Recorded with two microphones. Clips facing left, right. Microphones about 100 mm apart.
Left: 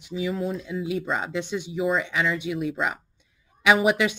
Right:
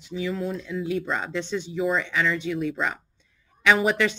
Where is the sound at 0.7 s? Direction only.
15° left (ahead or behind).